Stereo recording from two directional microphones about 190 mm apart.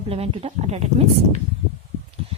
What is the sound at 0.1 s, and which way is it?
Speech, 30° right (ahead or behind).